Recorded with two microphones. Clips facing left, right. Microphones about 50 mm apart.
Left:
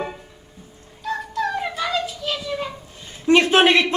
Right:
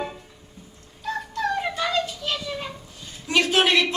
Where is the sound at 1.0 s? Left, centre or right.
Centre.